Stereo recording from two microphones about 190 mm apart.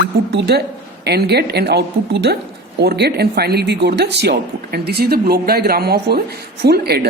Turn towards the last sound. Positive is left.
turn(degrees=-55)  # may be behind; listen again after turning